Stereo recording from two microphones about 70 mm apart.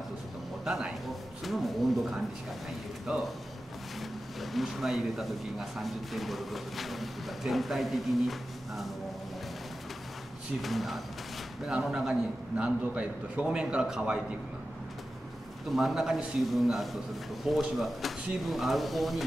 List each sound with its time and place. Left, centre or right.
0.7 s a man's voice: centre
4.4 s speech: centre
10.6 s a man's voice: centre
15.7 s speech: centre